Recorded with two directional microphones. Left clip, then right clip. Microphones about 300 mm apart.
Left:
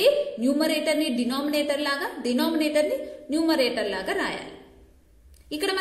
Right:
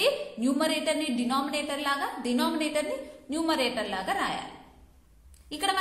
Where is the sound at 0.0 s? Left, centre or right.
Centre.